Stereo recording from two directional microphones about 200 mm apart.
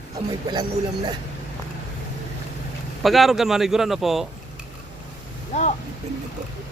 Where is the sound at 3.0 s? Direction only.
Centre (ahead or behind).